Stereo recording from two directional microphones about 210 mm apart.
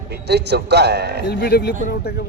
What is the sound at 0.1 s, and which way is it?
A man's voice, 55° right (ahead or behind).